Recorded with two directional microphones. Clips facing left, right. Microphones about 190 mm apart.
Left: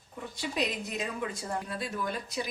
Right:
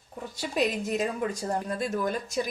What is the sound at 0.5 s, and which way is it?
A woman's voice, 50° right (ahead or behind).